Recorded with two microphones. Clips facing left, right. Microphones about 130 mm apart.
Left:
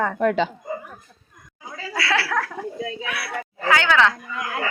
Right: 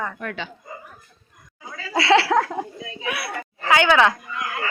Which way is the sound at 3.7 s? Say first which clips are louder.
Right 2 dB; 15° right (ahead or behind).